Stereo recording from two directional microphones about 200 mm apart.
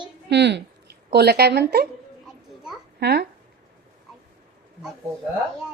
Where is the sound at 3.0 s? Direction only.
55° right (ahead or behind).